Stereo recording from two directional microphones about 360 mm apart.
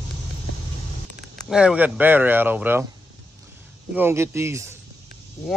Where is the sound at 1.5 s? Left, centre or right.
Centre.